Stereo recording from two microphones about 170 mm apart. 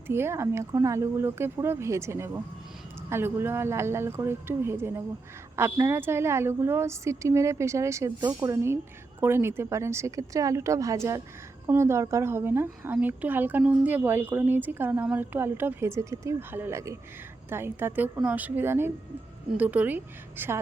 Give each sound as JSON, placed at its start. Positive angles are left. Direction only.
{"t": 0.1, "sound": "a woman's voice", "side_deg": -15}